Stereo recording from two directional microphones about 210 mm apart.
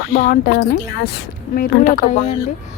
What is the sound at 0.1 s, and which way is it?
A woman's voice, 45° left (ahead or behind).